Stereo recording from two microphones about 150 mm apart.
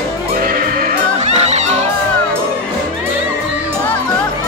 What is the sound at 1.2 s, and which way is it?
Music, 45° right (ahead or behind).